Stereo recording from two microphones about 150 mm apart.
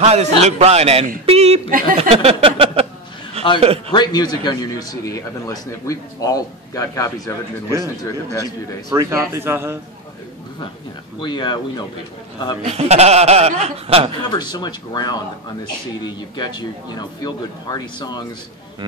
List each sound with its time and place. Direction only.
0.0 s speech: 45° right (ahead or behind)
1.7 s speech: 70° right (ahead or behind)
2.0 s a sound: 40° right (ahead or behind)
3.9 s a man's voice: 30° left (ahead or behind)
8.9 s a man's voice: 20° right (ahead or behind)
11.1 s speech: 30° left (ahead or behind)
12.6 s speech: 45° right (ahead or behind)
14.3 s a man's voice: 30° left (ahead or behind)